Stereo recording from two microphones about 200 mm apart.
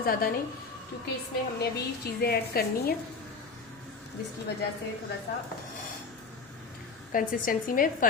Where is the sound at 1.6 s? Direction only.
50° left (ahead or behind).